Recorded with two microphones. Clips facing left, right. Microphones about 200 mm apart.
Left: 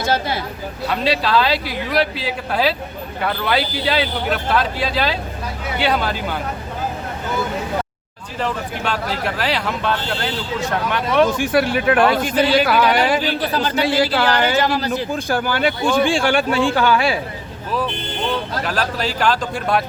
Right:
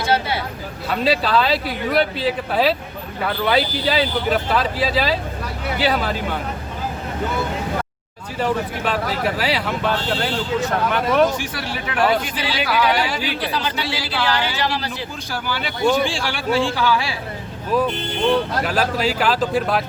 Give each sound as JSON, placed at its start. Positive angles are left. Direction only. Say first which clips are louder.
{"t": 0.9, "sound": "speech", "louder": "even", "side_deg": 0}
{"t": 8.4, "sound": "speech", "louder": "right 2 dB", "side_deg": -5}
{"t": 11.3, "sound": "speech", "louder": "left 10 dB", "side_deg": 55}
{"t": 18.6, "sound": "speech", "louder": "right 2 dB", "side_deg": -10}